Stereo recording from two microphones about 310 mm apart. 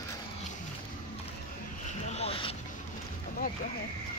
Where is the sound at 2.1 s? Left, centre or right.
Centre.